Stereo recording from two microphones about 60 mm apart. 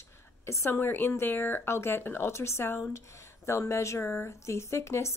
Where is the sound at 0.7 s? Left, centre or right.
Left.